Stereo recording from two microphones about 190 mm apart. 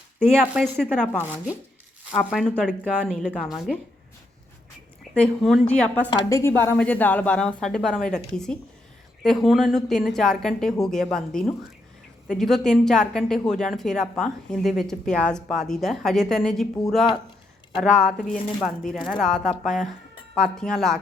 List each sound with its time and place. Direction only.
0.2 s a woman's voice: centre (ahead or behind)
5.1 s a woman's voice: 5° left (ahead or behind)
6.1 s a woman's voice: 15° left (ahead or behind)
17.7 s a woman's voice: 5° left (ahead or behind)